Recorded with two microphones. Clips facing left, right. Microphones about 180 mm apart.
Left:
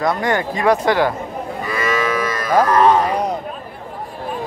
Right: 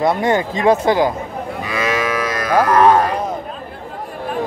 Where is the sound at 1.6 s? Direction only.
85° right.